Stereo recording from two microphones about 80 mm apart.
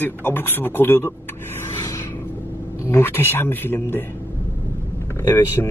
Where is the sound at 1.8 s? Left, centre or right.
Left.